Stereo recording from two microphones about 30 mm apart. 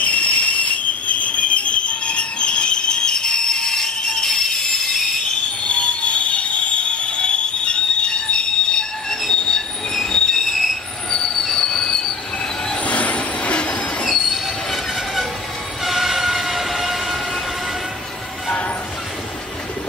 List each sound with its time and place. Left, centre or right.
0.0 s train: left; by 5.0 s centre
5.6 s train: left
9.3 s train wheels squealing: left
10.5 s train wheels squealing: centre
11.1 s train: centre
12.8 s train: left
14.0 s train wheels squealing: centre
15.8 s train: centre